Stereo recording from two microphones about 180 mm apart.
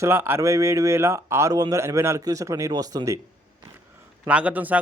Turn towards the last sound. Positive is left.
turn(degrees=-10)  # may be behind; listen again after turning